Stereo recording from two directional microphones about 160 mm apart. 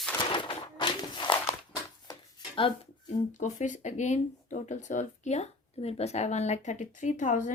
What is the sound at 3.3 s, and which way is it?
Speech, 50° left (ahead or behind).